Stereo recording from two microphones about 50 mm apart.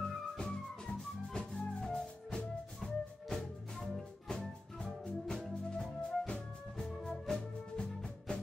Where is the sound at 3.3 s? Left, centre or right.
Centre.